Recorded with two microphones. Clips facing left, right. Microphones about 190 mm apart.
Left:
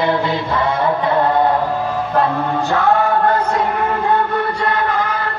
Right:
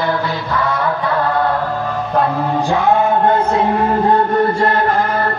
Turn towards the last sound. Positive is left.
turn(degrees=-45)  # may be behind; listen again after turning